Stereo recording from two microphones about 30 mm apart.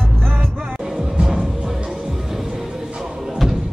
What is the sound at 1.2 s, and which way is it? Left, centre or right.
Music, right.